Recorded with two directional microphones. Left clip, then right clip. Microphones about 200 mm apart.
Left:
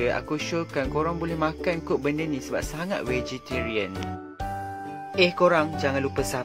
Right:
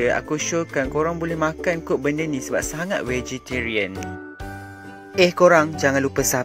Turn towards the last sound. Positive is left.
turn(degrees=-40)  # may be behind; listen again after turning